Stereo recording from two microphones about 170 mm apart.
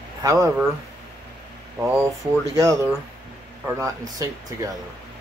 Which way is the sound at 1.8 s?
15° right (ahead or behind).